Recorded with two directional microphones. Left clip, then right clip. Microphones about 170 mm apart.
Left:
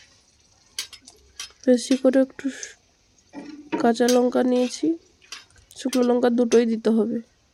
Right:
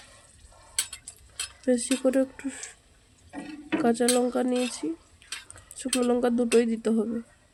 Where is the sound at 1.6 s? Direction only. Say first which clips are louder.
Left 6 dB; 25° left (ahead or behind).